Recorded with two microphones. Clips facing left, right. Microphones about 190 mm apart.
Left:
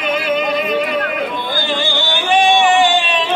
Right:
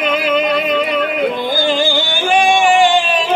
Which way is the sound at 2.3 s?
50° right (ahead or behind).